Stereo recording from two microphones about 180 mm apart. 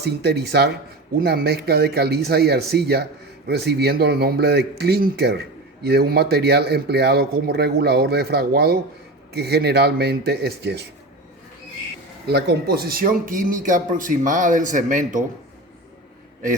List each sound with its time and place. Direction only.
0.0 s speech: 65° right (ahead or behind)
12.3 s speech: 60° right (ahead or behind); by 15.2 s 45° right (ahead or behind)